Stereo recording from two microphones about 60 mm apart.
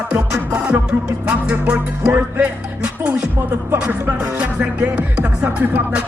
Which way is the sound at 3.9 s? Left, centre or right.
Right.